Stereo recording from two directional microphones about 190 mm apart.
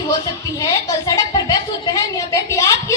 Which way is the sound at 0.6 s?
15° left (ahead or behind).